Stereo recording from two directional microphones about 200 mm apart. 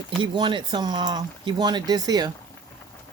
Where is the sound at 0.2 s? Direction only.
25° right (ahead or behind).